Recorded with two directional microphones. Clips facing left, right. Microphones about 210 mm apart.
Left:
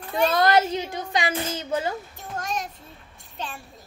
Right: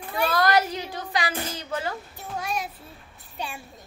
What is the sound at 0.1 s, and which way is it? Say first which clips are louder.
Child singing: left 2 dB; 25° left (ahead or behind).